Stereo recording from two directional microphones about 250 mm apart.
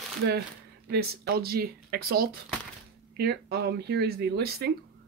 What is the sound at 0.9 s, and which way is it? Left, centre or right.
Speech, right.